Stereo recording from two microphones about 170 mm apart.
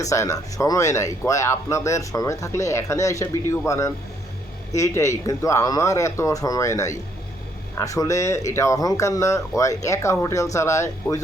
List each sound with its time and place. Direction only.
0.0 s speech: 20° left (ahead or behind)